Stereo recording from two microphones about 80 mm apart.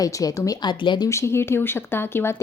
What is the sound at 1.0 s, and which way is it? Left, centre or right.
A woman's voice, left.